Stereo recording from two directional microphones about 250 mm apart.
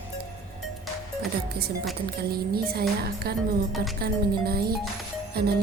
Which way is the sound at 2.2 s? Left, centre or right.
Right.